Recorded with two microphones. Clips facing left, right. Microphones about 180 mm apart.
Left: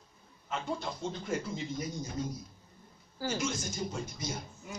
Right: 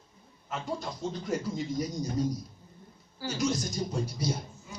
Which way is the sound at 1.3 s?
40° right (ahead or behind).